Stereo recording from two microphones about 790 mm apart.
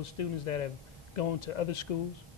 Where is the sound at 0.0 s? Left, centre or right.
Left.